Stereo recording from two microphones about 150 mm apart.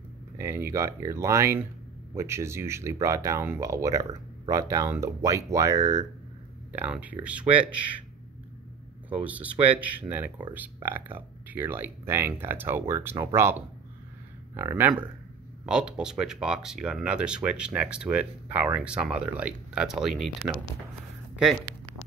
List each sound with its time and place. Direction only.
0.4 s speech: 15° right (ahead or behind)
6.7 s speech: 10° right (ahead or behind)
9.1 s speech: 10° right (ahead or behind)